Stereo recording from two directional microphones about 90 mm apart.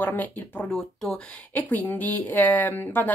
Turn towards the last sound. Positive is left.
turn(degrees=25)  # may be behind; listen again after turning